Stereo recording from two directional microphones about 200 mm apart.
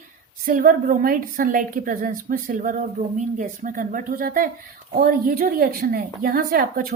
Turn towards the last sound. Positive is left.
turn(degrees=-45)  # may be behind; listen again after turning